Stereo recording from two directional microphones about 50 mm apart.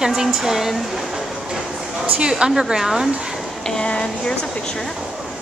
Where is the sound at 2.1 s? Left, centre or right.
Centre.